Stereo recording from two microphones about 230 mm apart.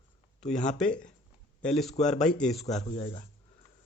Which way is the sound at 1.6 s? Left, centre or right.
Centre.